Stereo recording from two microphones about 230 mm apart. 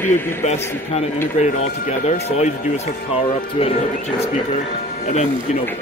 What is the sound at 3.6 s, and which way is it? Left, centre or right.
Speech, left.